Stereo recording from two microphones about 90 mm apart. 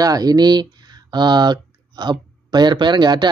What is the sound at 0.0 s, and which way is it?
Speech, 45° right (ahead or behind).